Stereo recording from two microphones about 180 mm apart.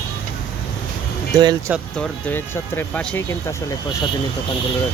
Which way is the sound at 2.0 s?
10° left (ahead or behind).